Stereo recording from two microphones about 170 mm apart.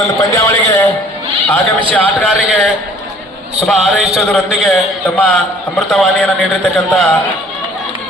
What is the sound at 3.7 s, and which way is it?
A man's voice, centre (ahead or behind).